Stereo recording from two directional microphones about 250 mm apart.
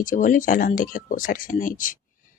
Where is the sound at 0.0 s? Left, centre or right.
Left.